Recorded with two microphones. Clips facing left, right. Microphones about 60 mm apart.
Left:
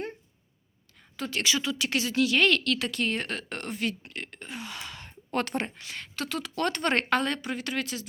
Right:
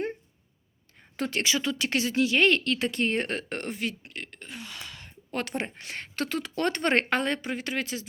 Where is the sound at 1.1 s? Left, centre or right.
Right.